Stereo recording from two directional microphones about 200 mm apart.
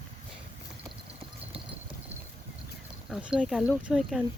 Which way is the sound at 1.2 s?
30° right (ahead or behind).